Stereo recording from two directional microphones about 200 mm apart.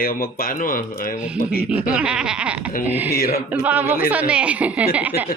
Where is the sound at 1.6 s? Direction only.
5° right (ahead or behind).